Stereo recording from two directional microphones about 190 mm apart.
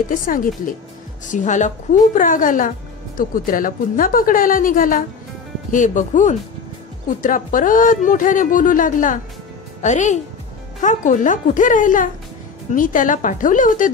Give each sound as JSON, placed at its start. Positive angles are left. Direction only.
{"t": 0.1, "sound": "speech", "side_deg": 45}